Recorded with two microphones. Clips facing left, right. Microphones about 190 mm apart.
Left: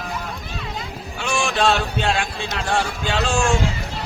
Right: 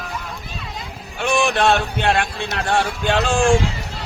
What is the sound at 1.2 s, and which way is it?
Speech, 60° right (ahead or behind).